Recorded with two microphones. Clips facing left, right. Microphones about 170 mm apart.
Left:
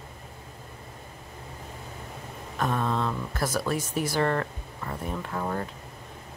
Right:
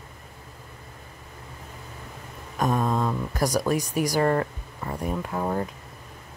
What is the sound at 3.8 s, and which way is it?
Speech, 40° right (ahead or behind).